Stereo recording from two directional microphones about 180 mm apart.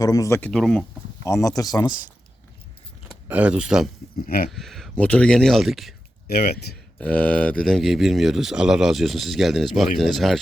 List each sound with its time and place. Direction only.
0.0 s speech: 20° left (ahead or behind); by 0.9 s 5° left (ahead or behind)
1.2 s speech: 15° left (ahead or behind)
3.1 s speech: 10° right (ahead or behind)
6.2 s speech: 60° left (ahead or behind)
7.0 s speech: 5° left (ahead or behind)